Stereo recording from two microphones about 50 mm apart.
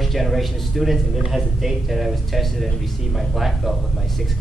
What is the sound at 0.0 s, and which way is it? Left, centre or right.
Speech, centre.